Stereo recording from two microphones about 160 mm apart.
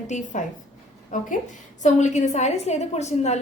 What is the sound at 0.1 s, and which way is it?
A woman's voice, 50° left (ahead or behind).